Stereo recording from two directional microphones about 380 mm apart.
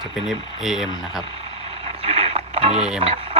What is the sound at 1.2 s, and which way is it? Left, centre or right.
Vehicle, centre.